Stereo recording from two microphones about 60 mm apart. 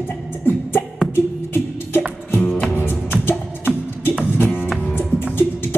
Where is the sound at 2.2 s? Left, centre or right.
Left.